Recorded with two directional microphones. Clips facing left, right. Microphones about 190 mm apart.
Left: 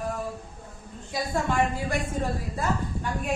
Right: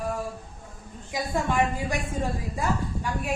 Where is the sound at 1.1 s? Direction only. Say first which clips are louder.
Even; 15° right (ahead or behind).